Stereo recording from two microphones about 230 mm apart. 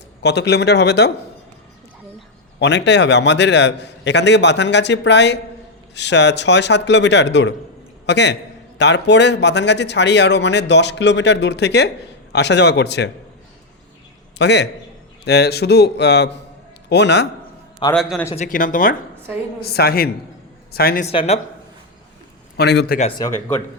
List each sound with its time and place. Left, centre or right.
0.2 s speech: left
2.6 s a man's voice: left
14.3 s speech: left
17.9 s speech: centre
18.3 s speech: left
21.1 s speech: left
22.5 s speech: left
23.0 s speech: left